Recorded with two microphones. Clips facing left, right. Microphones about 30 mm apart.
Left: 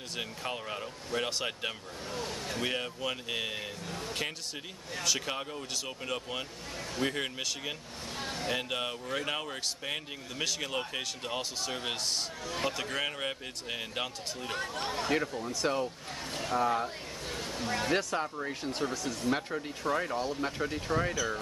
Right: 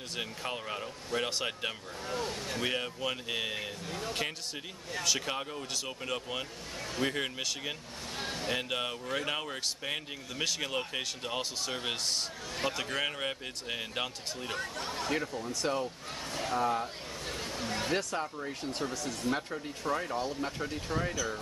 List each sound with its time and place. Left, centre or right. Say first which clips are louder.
0.1 s speech: even; centre
2.0 s speech: right 3 dB; centre
2.4 s speech: left 3 dB; centre
14.8 s speech: left 2 dB; left
15.7 s speech: left 2 dB; centre
17.9 s speech: left 2 dB; centre